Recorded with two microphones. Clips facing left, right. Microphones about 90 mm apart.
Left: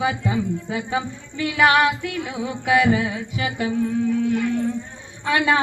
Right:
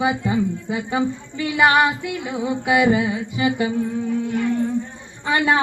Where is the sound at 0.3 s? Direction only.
5° right (ahead or behind).